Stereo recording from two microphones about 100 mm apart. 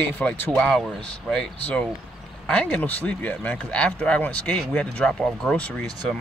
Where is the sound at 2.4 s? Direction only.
10° left (ahead or behind).